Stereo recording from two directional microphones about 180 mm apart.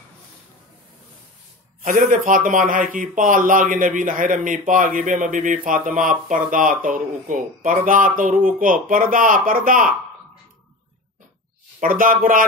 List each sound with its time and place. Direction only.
1.8 s speech: 50° right (ahead or behind)
11.8 s speech: 50° right (ahead or behind)